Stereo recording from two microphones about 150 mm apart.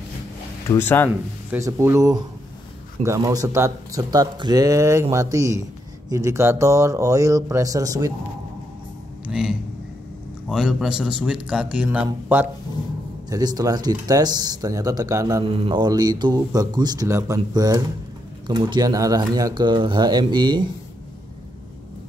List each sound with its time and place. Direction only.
0.7 s speech: 15° left (ahead or behind)
1.5 s speech: 20° right (ahead or behind)
9.2 s a man's voice: 5° right (ahead or behind)
13.3 s speech: 25° right (ahead or behind)
15.4 s speech: 40° right (ahead or behind)